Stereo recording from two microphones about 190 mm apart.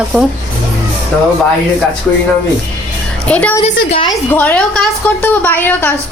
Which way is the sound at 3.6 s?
30° left (ahead or behind).